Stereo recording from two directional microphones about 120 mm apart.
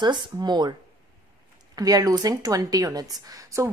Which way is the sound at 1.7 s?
30° right (ahead or behind).